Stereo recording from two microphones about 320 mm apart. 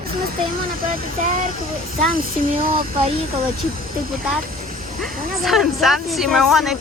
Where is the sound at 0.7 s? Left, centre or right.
Right.